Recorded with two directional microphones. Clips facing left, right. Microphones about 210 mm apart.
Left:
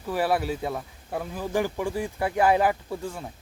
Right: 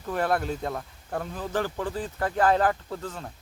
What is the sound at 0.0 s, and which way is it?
Speech, 5° left (ahead or behind).